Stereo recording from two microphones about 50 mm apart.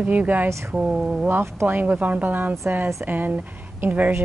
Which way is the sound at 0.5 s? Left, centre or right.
Right.